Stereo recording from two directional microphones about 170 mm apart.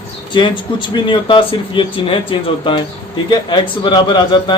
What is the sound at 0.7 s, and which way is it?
A man's voice, 30° left (ahead or behind).